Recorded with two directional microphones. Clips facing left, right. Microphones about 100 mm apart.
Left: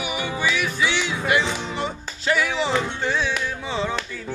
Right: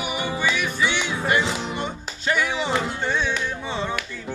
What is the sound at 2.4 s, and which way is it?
Music, 5° right (ahead or behind).